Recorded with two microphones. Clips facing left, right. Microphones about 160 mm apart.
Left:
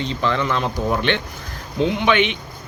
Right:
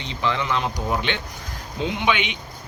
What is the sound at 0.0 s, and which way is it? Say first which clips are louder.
Speech: left 4 dB; 15° right (ahead or behind).